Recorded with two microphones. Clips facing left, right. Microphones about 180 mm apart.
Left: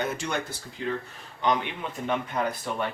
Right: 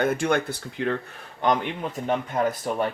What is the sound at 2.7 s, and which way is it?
Speech, 40° right (ahead or behind).